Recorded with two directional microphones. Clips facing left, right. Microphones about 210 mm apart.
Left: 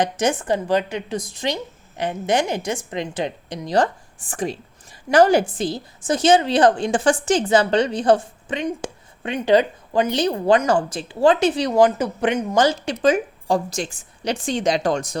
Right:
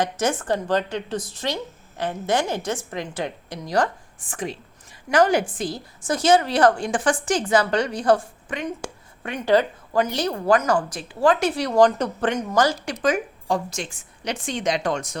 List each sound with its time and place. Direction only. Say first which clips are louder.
0.0 s a woman's voice: left 3 dB; 15° left (ahead or behind)
4.3 s a woman's voice: left 4 dB; 35° left (ahead or behind); by 11.8 s 20° left (ahead or behind)
11.8 s a woman's voice: even; 5° left (ahead or behind)
12.5 s a woman's voice: left 2 dB; 25° left (ahead or behind)